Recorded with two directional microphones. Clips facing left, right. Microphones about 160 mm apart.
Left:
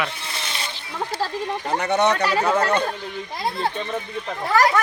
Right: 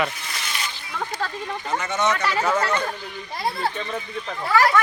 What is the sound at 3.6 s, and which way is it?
Speech, 20° left (ahead or behind).